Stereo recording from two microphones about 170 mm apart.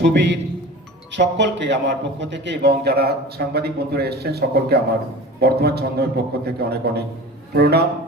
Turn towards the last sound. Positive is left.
turn(degrees=-70)  # may be behind; listen again after turning